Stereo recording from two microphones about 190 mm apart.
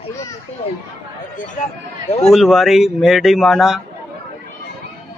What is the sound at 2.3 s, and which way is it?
A man's voice, centre (ahead or behind).